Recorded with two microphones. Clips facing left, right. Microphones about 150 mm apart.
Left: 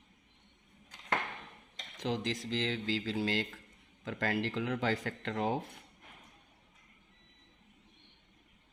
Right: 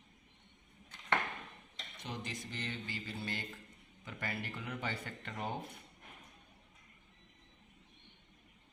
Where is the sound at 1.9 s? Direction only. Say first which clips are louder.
Left 10 dB; 90° left.